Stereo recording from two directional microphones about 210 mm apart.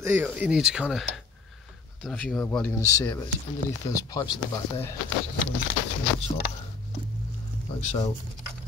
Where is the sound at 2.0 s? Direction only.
5° left (ahead or behind).